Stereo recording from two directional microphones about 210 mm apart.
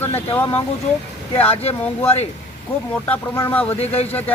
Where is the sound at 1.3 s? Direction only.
30° left (ahead or behind).